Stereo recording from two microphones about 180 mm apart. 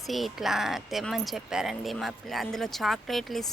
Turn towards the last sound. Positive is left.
turn(degrees=0)  # may be behind; listen again after turning